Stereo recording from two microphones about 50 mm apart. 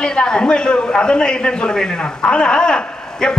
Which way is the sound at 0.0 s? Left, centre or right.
Centre.